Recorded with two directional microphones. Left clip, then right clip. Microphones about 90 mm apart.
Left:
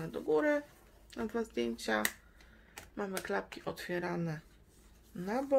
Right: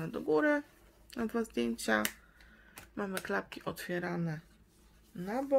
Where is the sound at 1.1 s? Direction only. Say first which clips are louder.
Right 1 dB; 50° right (ahead or behind).